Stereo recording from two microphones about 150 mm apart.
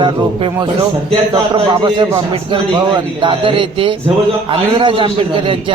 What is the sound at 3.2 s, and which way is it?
Speech, 35° right (ahead or behind).